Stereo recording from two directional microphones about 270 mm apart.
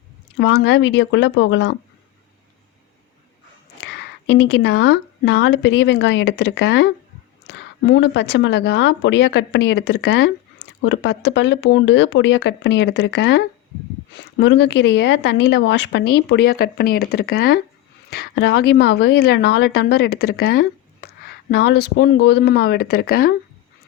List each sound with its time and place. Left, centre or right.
0.3 s speech: left
3.8 s a woman's voice: left